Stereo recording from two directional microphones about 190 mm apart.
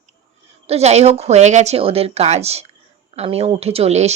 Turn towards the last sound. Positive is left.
turn(degrees=-35)  # may be behind; listen again after turning